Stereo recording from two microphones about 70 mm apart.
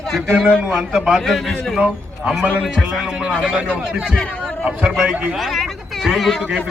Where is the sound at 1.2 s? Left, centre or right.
Centre.